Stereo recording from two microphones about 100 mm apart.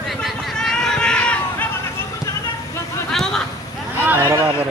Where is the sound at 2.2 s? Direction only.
30° left (ahead or behind).